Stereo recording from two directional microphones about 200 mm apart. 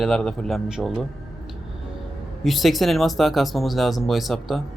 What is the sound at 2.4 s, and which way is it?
Speech, centre (ahead or behind).